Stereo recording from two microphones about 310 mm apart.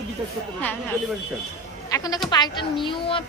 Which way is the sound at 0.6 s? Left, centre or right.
Centre.